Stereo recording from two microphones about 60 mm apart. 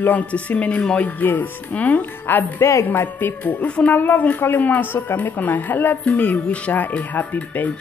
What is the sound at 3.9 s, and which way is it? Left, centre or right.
Speech, left.